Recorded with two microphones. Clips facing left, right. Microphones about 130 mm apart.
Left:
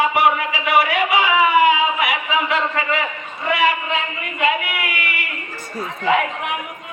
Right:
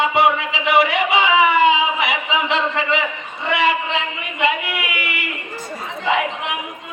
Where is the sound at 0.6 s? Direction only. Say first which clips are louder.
Right 1 dB; 20° right (ahead or behind).